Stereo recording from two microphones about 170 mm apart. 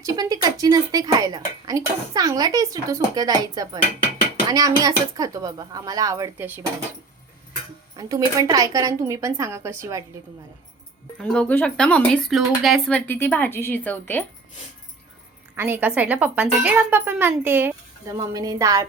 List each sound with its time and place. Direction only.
0.0 s speech: 20° right (ahead or behind)
7.9 s speech: 20° right (ahead or behind)
11.2 s speech: 5° left (ahead or behind)
15.5 s speech: 10° right (ahead or behind)